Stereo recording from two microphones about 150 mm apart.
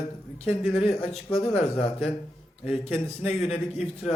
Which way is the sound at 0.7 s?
45° left (ahead or behind).